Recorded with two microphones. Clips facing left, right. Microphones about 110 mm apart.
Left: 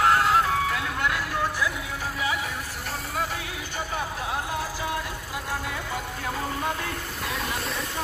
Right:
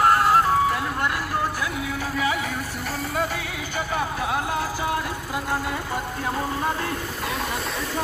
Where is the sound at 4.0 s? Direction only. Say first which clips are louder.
Right 5 dB; 65° right (ahead or behind).